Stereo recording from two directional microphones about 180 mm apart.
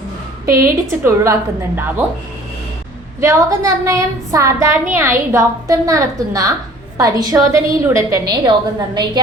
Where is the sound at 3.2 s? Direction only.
15° right (ahead or behind).